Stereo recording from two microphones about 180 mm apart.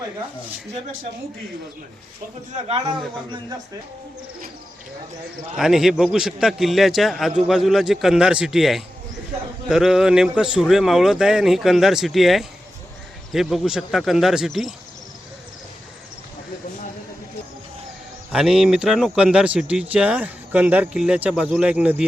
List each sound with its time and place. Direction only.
2.5 s speech: 35° right (ahead or behind)
5.5 s speech: centre (ahead or behind)
18.3 s speech: centre (ahead or behind)